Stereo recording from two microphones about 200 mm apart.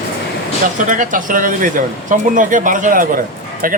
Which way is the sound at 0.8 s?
40° right (ahead or behind).